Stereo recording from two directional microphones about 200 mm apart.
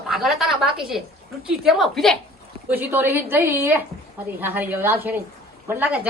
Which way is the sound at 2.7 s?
10° right (ahead or behind).